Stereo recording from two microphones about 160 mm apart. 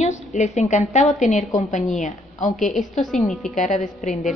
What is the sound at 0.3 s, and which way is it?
A woman's voice, 45° left (ahead or behind).